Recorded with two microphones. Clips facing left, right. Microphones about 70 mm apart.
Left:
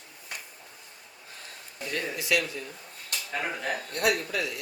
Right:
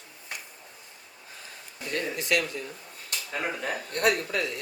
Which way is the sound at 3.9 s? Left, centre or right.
Right.